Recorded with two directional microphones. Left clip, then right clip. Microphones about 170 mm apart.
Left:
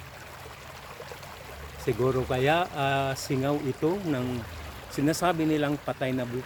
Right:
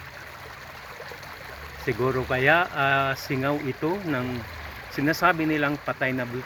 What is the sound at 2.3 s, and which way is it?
Speech, 15° left (ahead or behind).